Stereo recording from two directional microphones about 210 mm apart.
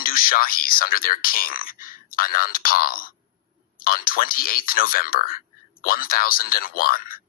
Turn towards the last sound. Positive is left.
turn(degrees=45)  # may be behind; listen again after turning